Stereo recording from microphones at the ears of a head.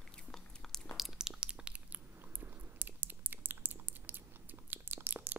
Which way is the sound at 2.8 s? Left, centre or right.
Right.